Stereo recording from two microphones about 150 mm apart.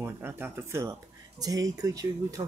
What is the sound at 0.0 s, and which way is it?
Speech, 15° right (ahead or behind).